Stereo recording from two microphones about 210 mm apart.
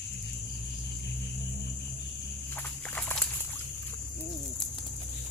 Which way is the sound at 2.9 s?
10° left (ahead or behind).